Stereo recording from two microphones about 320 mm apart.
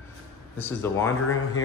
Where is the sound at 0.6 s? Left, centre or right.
Centre.